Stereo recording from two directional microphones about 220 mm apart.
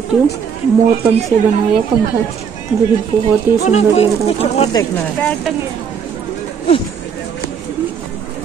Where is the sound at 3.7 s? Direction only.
30° left (ahead or behind).